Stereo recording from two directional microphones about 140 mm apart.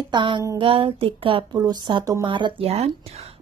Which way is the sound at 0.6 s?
40° right (ahead or behind).